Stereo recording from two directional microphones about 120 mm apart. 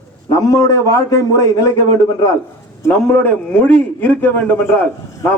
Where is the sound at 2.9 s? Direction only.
15° left (ahead or behind).